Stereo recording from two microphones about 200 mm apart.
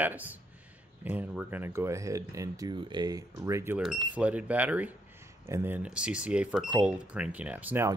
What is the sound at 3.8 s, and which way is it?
Speech, 5° right (ahead or behind).